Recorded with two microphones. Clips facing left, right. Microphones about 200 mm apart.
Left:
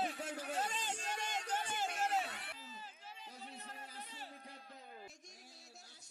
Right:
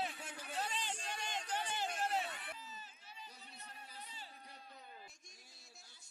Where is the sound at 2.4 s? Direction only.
90° left.